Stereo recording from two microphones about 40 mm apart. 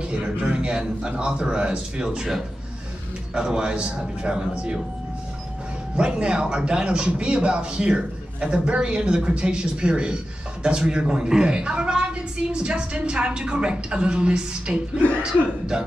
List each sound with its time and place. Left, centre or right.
0.0 s speech: right
3.3 s speech: right
5.9 s speech: right
15.7 s music: centre